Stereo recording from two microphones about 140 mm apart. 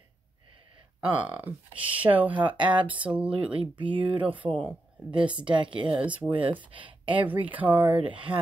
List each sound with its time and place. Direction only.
1.1 s speech: 10° right (ahead or behind)
2.4 s speech: 35° right (ahead or behind)
2.9 s speech: 10° right (ahead or behind)
3.5 s speech: 35° right (ahead or behind)
5.2 s speech: 10° right (ahead or behind)
5.5 s speech: 35° right (ahead or behind)
5.9 s speech: 10° right (ahead or behind)
6.6 s speech: 35° right (ahead or behind)
7.2 s speech: 10° right (ahead or behind)
8.1 s speech: 35° right (ahead or behind)